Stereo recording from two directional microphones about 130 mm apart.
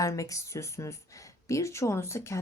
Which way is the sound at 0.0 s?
25° left (ahead or behind).